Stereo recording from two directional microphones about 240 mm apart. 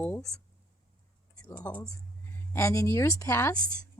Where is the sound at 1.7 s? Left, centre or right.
Centre.